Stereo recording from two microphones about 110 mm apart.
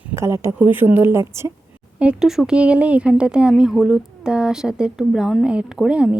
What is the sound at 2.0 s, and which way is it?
Speech, 10° right (ahead or behind).